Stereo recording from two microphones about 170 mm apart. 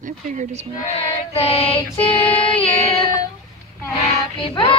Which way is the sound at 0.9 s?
35° left (ahead or behind).